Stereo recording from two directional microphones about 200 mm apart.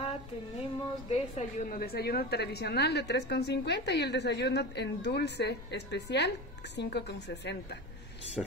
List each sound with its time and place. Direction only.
1.1 s a woman's voice: 35° left (ahead or behind)
1.8 s a woman's voice: 50° left (ahead or behind)
8.4 s speech: centre (ahead or behind)